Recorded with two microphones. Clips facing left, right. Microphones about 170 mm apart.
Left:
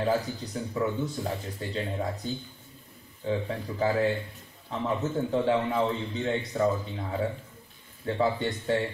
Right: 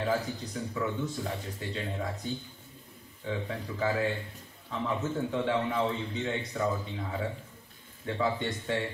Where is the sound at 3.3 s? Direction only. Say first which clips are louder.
Left 5 dB; 35° left (ahead or behind).